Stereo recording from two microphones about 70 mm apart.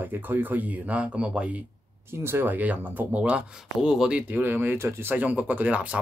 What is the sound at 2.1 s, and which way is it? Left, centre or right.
Speech, right.